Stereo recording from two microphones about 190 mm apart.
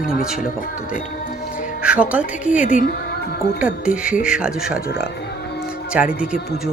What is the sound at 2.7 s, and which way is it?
Speech, 50° left (ahead or behind).